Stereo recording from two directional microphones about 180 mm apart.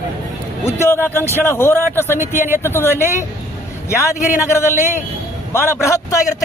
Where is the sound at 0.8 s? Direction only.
15° left (ahead or behind).